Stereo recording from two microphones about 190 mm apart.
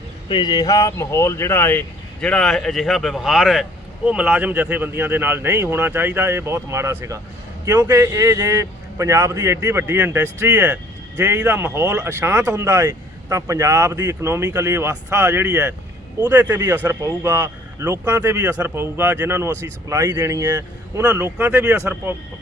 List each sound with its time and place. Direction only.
0.3 s a man's voice: 25° left (ahead or behind); by 22.1 s 10° right (ahead or behind)